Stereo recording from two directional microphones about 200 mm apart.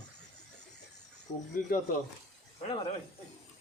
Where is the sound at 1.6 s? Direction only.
45° left (ahead or behind).